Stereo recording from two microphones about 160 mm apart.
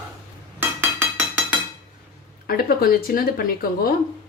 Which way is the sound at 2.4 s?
65° left (ahead or behind).